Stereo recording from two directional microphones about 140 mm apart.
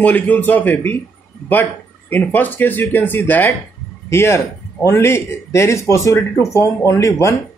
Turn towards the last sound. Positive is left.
turn(degrees=20)  # may be behind; listen again after turning